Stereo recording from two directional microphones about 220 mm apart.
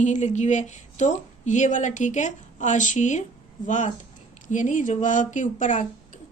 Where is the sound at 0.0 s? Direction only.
30° left (ahead or behind).